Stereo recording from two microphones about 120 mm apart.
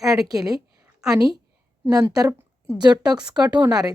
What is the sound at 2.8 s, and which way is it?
Speech, 35° right (ahead or behind).